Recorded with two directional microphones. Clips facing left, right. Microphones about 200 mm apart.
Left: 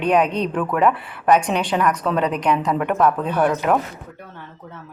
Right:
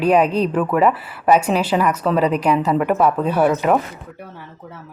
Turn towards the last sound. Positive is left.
turn(degrees=-5)  # may be behind; listen again after turning